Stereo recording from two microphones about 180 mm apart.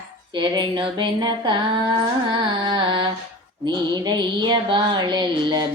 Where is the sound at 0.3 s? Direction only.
25° right (ahead or behind).